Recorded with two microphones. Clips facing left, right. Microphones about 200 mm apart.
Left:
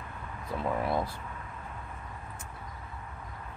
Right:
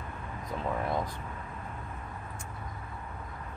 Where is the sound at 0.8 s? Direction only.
10° left (ahead or behind).